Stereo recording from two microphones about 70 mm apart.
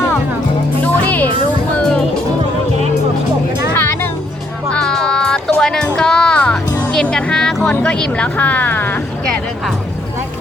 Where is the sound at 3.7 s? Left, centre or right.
Left.